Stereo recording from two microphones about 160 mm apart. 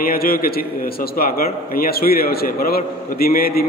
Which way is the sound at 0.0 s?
65° left (ahead or behind).